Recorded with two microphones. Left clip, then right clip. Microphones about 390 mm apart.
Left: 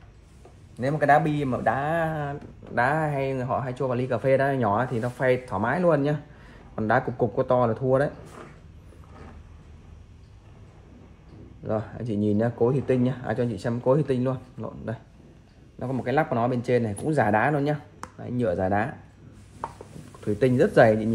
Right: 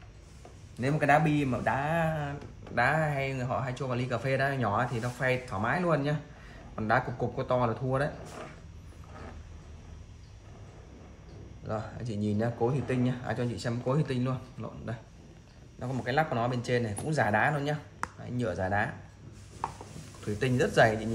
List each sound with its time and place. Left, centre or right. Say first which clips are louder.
0.7 s speech: left 5 dB; centre
6.7 s a sound: left 4 dB; centre
7.3 s speech: left 6 dB; centre
11.6 s speech: left 7 dB; centre
20.3 s speech: left 6 dB; centre